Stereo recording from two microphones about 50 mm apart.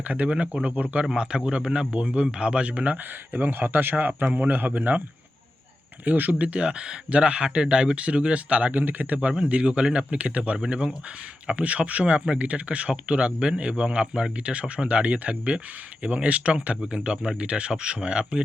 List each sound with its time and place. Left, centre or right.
0.1 s a man's voice: right
6.1 s speech: right; by 18.4 s centre